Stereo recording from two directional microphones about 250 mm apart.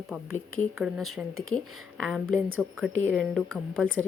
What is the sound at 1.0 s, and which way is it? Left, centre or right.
Speech, right.